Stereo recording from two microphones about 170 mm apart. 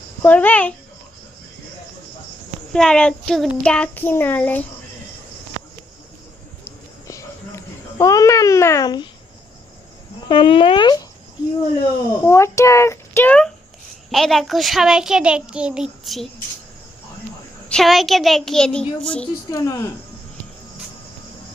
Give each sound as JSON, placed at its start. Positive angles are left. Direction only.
{"t": 0.2, "sound": "child singing", "side_deg": 10}
{"t": 2.7, "sound": "child singing", "side_deg": 5}
{"t": 7.1, "sound": "a sound", "side_deg": 20}
{"t": 10.2, "sound": "speech", "side_deg": 30}
{"t": 12.2, "sound": "child singing", "side_deg": 15}
{"t": 14.1, "sound": "a child's voice", "side_deg": 0}
{"t": 17.7, "sound": "a child's voice", "side_deg": 0}
{"t": 19.5, "sound": "child singing", "side_deg": 20}